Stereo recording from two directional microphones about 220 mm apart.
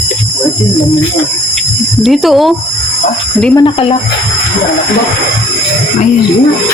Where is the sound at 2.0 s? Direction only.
Centre (ahead or behind).